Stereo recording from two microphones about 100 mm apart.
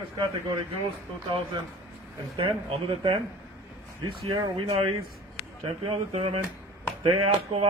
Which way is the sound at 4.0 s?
50° right (ahead or behind).